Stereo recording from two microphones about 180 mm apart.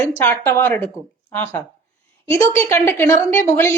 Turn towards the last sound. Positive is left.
turn(degrees=15)  # may be behind; listen again after turning